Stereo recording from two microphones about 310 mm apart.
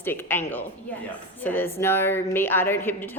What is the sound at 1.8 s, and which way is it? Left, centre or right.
A woman's voice, centre.